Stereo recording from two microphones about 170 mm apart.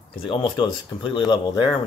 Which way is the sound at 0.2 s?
30° left (ahead or behind).